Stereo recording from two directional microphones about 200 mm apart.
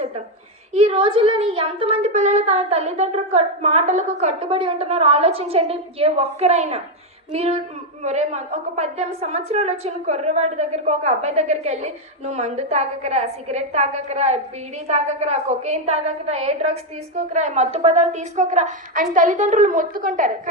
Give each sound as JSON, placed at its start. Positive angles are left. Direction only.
{"t": 0.7, "sound": "a woman's voice", "side_deg": -30}